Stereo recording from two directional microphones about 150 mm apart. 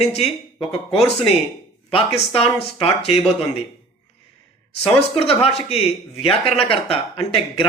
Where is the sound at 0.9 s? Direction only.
40° left (ahead or behind).